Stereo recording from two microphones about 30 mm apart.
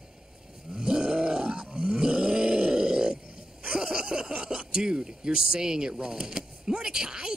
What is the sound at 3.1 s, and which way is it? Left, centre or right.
Grunt, right.